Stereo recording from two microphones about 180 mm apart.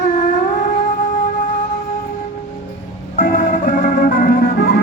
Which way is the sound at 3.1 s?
45° left (ahead or behind).